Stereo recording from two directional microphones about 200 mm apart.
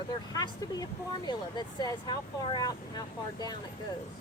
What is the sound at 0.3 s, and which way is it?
Speech, 20° left (ahead or behind).